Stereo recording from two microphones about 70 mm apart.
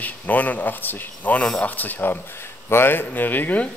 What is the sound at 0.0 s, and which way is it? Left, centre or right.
Speech, left.